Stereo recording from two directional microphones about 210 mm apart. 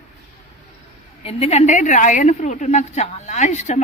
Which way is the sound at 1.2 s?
30° left (ahead or behind).